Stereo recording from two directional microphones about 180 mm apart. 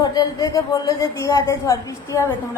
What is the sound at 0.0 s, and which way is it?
Speech, 20° left (ahead or behind).